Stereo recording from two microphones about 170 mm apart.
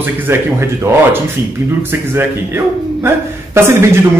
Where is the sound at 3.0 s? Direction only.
15° right (ahead or behind).